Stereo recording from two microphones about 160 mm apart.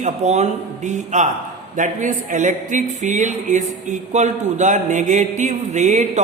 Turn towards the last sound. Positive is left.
turn(degrees=-50)  # may be behind; listen again after turning